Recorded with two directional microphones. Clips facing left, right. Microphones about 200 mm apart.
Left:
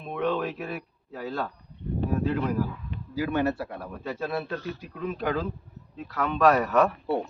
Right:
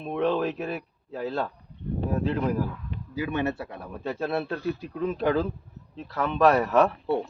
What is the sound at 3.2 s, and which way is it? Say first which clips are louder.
Speech: left 2 dB; 20° right (ahead or behind).